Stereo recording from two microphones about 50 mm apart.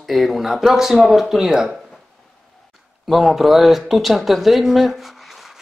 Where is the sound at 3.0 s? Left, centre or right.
Centre.